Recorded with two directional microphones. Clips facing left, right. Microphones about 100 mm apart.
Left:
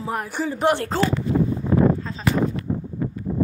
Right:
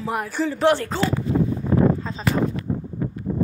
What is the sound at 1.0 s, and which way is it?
Speech, 50° left (ahead or behind).